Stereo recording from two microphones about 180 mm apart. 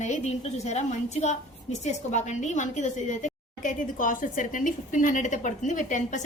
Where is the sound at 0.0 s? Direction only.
40° left (ahead or behind).